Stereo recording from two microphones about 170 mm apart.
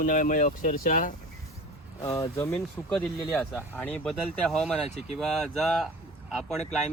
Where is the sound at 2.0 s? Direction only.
20° left (ahead or behind).